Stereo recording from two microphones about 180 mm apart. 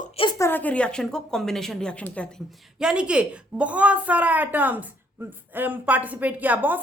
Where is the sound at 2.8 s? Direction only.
5° right (ahead or behind).